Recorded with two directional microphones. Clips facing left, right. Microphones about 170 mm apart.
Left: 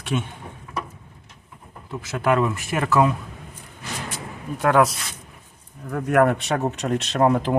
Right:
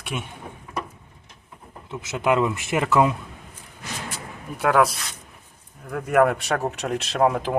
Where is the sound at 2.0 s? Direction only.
20° right (ahead or behind).